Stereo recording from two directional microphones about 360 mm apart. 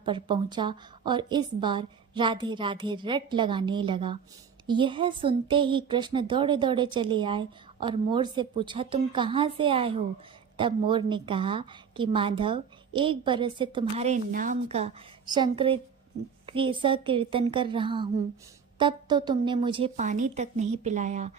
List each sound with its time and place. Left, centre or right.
0.0 s a woman's voice: centre